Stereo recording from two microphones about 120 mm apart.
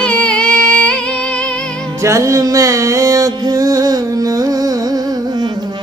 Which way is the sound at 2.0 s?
25° right (ahead or behind).